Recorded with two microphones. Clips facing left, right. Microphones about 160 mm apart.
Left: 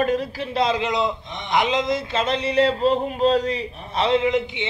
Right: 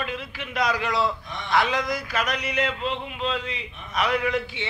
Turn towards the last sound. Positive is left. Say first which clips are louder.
# left 5 dB
turn(degrees=20)  # may be behind; listen again after turning